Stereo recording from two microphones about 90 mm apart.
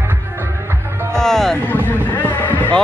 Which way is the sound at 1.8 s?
20° left (ahead or behind).